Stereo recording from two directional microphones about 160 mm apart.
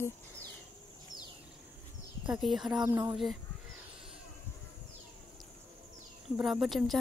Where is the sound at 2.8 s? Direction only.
15° right (ahead or behind).